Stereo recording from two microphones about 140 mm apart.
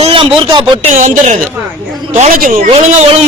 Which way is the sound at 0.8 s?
60° right (ahead or behind).